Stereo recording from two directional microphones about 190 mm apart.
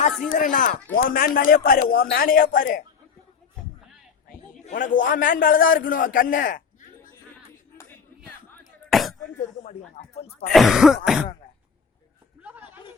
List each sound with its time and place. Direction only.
0.3 s a man's voice: 40° left (ahead or behind)
4.7 s a man's voice: 45° left (ahead or behind)
8.9 s a sound: centre (ahead or behind)
10.0 s a man's voice: 45° left (ahead or behind)
10.5 s throat clearing: centre (ahead or behind)
12.4 s a sound: 10° right (ahead or behind)